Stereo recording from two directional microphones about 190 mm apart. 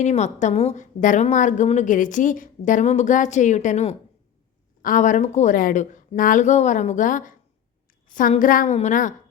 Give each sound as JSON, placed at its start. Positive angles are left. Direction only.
{"t": 0.0, "sound": "a woman's voice", "side_deg": 35}